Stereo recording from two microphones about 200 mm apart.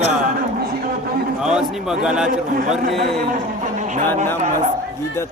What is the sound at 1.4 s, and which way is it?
Speech, 5° right (ahead or behind).